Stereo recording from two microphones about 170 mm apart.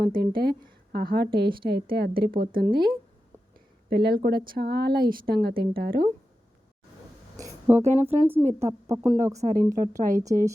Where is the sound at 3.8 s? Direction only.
70° right (ahead or behind).